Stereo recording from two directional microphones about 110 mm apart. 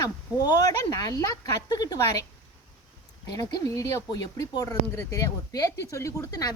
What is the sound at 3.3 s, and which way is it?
A woman's voice, 35° left (ahead or behind).